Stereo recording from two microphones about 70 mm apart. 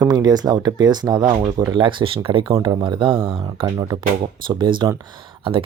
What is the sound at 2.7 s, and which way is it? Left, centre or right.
Speech, right.